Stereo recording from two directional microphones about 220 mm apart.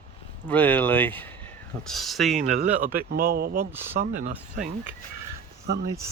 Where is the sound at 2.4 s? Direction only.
35° right (ahead or behind).